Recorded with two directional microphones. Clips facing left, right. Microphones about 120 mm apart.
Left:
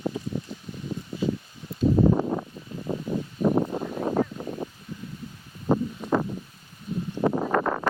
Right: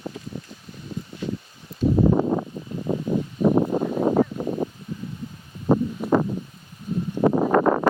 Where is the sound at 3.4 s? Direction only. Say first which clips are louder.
Right 4 dB; 75° right (ahead or behind).